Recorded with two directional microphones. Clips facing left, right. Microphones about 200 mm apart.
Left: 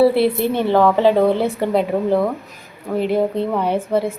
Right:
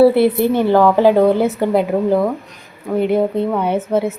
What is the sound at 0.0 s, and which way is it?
A woman's voice, centre (ahead or behind).